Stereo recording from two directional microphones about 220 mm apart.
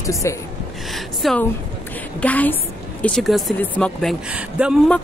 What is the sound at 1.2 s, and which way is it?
Speech, centre (ahead or behind).